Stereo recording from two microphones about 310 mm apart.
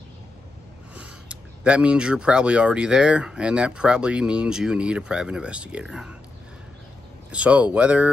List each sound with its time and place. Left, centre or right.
0.9 s speech: centre
7.2 s speech: centre